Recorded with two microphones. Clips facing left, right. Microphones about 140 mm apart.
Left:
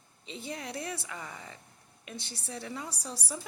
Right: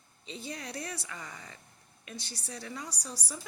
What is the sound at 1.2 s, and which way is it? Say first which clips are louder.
Speech: left 2 dB; 10° left (ahead or behind).